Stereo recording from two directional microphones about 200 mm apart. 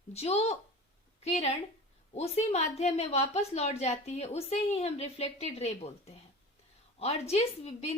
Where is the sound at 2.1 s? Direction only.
30° left (ahead or behind).